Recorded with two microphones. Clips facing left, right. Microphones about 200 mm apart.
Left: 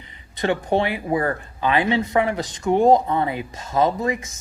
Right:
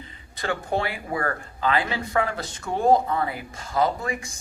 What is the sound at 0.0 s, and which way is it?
Speech, 20° left (ahead or behind).